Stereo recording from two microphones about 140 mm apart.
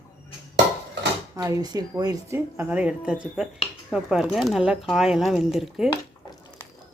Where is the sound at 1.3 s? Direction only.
25° right (ahead or behind); by 5.9 s 5° right (ahead or behind).